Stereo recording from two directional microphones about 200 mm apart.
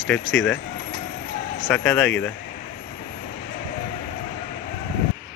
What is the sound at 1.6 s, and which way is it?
Speech, 5° left (ahead or behind).